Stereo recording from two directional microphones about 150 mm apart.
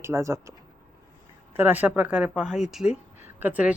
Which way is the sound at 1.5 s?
10° right (ahead or behind).